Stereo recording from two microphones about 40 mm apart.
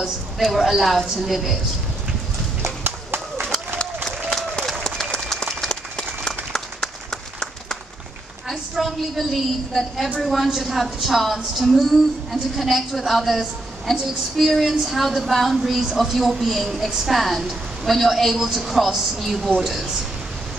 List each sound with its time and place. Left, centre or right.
0.4 s a woman's voice: centre
2.8 s run: right
5.1 s applause: centre
5.9 s applause: centre
8.5 s a woman's voice: centre